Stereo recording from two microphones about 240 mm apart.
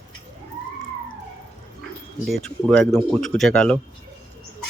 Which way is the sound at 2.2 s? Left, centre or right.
Centre.